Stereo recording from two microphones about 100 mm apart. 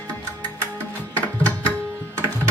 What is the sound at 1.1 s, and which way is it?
Music, 15° left (ahead or behind).